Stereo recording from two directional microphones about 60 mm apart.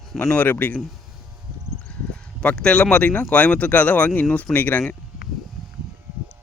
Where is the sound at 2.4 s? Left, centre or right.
Centre.